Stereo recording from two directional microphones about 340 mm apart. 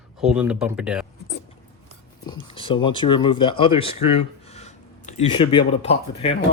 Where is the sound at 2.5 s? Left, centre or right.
Centre.